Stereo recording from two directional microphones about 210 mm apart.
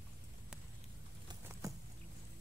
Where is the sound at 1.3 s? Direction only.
15° right (ahead or behind).